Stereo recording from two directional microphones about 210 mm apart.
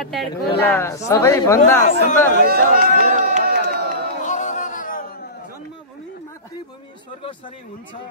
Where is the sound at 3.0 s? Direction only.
40° right (ahead or behind).